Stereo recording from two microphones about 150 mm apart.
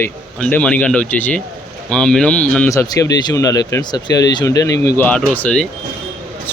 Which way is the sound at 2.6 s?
25° left (ahead or behind).